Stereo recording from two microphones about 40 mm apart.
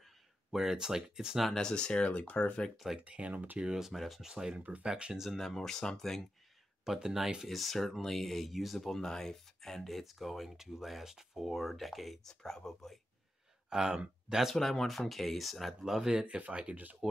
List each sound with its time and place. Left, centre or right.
0.5 s speech: centre
1.6 s speech: left
3.0 s speech: right
3.7 s speech: centre; by 5.1 s right
5.3 s speech: centre
6.8 s speech: centre
7.4 s speech: centre
12.3 s speech: centre
13.7 s speech: centre
14.5 s speech: centre
15.8 s speech: centre; by 16.7 s right
17.0 s speech: centre